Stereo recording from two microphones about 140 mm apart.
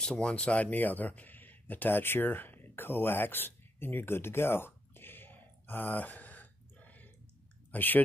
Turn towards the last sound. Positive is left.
turn(degrees=10)  # may be behind; listen again after turning